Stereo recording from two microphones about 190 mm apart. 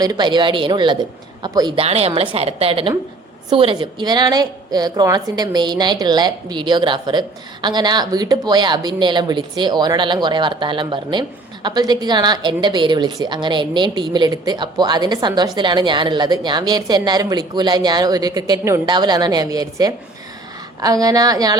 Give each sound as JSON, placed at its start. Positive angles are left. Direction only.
{"t": 0.0, "sound": "a woman's voice", "side_deg": -20}